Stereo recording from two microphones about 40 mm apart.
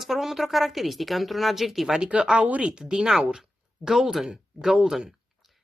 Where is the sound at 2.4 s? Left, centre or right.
Right.